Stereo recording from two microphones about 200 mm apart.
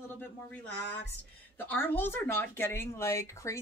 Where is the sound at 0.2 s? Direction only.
10° left (ahead or behind).